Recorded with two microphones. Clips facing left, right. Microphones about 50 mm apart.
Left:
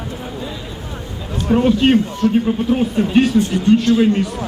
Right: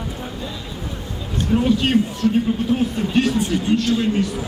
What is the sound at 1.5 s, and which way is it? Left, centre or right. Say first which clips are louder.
A man's voice: left 5 dB; centre.